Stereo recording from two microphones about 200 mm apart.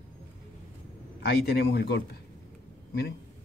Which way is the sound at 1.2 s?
55° left (ahead or behind).